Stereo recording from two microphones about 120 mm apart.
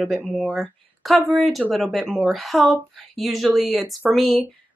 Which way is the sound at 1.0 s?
Centre (ahead or behind).